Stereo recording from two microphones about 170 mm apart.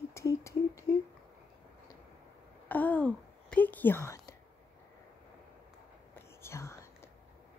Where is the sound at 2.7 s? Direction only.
10° left (ahead or behind).